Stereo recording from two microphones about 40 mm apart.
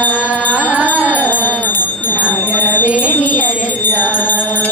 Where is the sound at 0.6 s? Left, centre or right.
Right.